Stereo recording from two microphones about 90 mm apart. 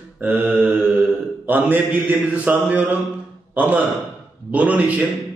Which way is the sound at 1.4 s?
20° right (ahead or behind).